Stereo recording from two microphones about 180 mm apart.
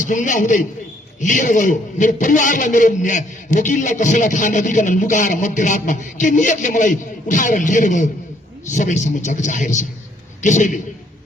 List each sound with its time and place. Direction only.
0.0 s a man's voice: 45° left (ahead or behind)